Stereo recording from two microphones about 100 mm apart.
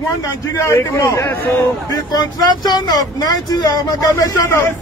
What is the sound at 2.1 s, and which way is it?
Speech, 45° left (ahead or behind).